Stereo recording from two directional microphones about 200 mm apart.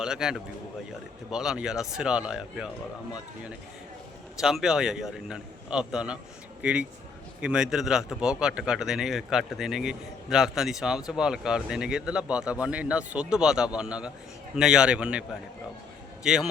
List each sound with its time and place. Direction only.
0.0 s a man's voice: 5° right (ahead or behind)
4.4 s a man's voice: centre (ahead or behind)
16.2 s a man's voice: 5° right (ahead or behind)